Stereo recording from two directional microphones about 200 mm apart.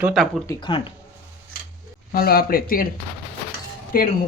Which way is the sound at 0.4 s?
25° left (ahead or behind).